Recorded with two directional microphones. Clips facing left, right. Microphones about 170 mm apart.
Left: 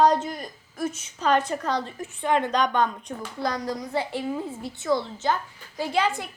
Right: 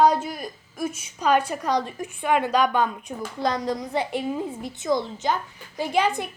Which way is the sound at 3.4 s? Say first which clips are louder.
Right 3 dB; 20° right (ahead or behind).